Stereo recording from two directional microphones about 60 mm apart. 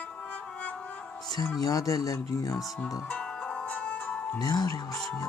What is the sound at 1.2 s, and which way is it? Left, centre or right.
Music, left.